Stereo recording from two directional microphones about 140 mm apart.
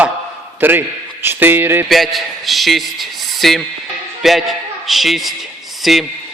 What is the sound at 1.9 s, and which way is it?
A man's voice, centre (ahead or behind).